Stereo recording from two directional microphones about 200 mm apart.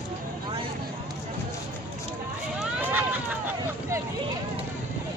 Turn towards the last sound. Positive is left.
turn(degrees=-10)  # may be behind; listen again after turning